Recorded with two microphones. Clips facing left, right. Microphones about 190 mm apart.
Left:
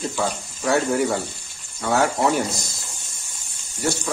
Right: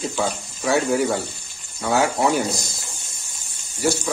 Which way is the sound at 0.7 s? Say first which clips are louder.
Right 1 dB; centre (ahead or behind).